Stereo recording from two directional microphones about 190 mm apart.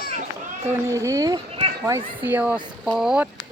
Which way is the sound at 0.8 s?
15° right (ahead or behind).